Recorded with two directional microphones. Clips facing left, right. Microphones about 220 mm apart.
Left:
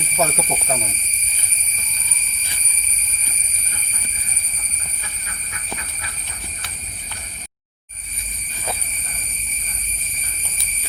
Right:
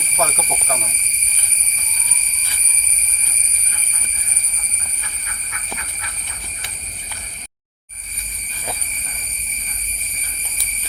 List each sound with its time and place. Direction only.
0.2 s speech: 15° left (ahead or behind)